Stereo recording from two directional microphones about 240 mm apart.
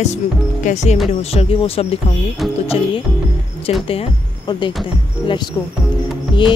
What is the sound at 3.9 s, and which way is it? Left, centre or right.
Speech, left.